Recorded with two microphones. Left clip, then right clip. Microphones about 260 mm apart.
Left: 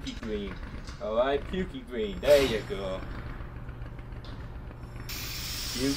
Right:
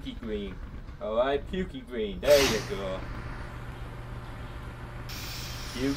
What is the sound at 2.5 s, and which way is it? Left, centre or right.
Speech, right.